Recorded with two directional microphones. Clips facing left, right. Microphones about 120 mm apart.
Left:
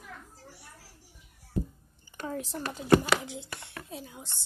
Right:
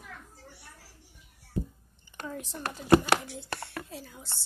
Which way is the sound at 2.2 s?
35° left (ahead or behind).